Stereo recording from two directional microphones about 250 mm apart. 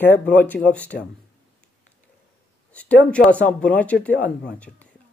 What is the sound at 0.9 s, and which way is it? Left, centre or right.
Speech, left.